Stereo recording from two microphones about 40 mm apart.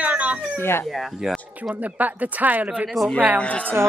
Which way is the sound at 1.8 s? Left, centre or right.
Right.